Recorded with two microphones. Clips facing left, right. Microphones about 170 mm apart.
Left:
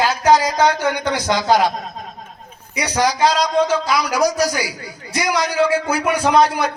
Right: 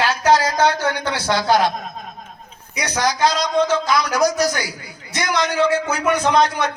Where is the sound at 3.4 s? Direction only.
35° left (ahead or behind).